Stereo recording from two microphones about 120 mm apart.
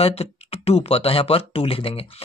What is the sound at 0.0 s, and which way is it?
Speech, 55° left (ahead or behind).